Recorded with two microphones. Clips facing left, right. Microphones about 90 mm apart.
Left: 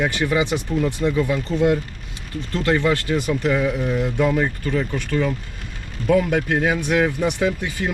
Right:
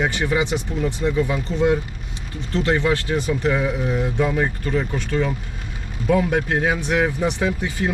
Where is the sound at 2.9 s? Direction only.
5° right (ahead or behind).